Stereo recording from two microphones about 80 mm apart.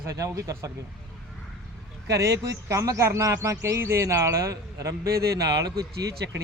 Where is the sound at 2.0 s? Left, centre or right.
Right.